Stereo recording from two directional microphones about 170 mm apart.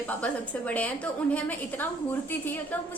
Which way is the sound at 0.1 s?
10° left (ahead or behind).